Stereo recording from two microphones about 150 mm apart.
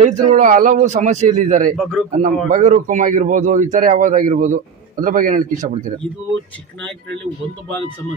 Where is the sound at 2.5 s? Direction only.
55° right (ahead or behind).